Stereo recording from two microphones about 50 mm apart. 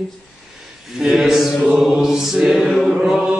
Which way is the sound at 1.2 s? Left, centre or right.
Centre.